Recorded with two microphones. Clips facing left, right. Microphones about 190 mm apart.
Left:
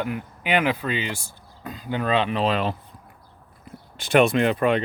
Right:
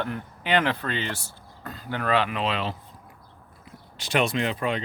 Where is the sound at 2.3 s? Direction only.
40° left (ahead or behind).